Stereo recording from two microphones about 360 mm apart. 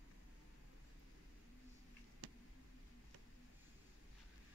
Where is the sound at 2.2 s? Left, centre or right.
Right.